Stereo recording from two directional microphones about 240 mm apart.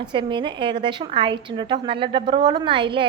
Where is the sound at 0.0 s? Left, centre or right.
Centre.